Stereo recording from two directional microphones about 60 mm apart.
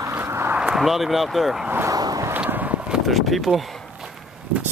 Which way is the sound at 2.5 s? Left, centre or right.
Right.